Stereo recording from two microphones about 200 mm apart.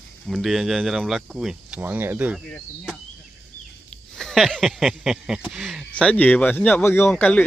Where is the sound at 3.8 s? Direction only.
Centre (ahead or behind).